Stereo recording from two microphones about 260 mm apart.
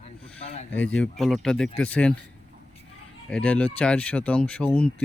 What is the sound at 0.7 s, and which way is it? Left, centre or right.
Speech, centre.